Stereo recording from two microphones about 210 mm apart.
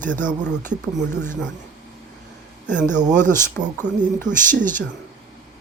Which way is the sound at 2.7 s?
10° left (ahead or behind).